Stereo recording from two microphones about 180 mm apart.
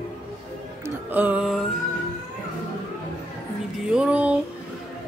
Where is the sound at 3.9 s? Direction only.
5° right (ahead or behind).